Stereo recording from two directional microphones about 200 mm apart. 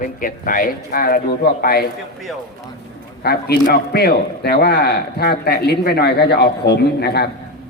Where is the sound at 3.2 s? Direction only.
50° left (ahead or behind).